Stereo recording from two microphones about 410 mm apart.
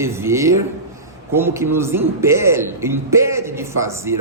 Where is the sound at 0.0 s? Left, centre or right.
Centre.